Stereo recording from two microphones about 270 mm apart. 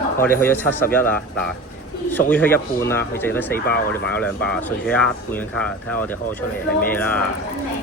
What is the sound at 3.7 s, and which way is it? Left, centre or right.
Speech, left.